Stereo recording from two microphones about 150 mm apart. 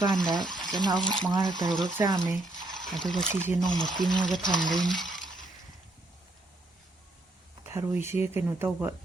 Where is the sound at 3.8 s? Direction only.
30° right (ahead or behind).